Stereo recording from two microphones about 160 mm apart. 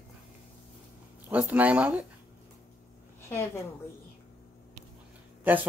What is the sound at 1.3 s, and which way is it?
Speech, 10° right (ahead or behind).